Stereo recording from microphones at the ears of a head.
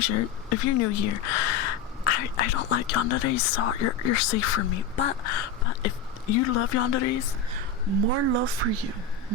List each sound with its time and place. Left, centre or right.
0.0 s speech: left
7.5 s speech: right